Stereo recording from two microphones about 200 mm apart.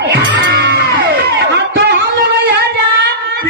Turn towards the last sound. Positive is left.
turn(degrees=-55)  # may be behind; listen again after turning